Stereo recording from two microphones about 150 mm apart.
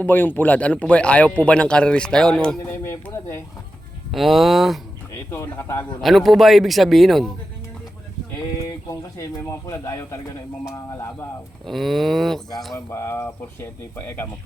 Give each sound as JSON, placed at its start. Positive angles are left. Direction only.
{"t": 0.0, "sound": "speech", "side_deg": 10}
{"t": 2.6, "sound": "speech", "side_deg": 15}
{"t": 4.1, "sound": "a man's voice", "side_deg": 0}
{"t": 5.3, "sound": "speech", "side_deg": 15}
{"t": 6.0, "sound": "a man's voice", "side_deg": 0}
{"t": 8.9, "sound": "speech", "side_deg": 20}
{"t": 11.6, "sound": "a man's voice", "side_deg": 0}
{"t": 12.7, "sound": "speech", "side_deg": 15}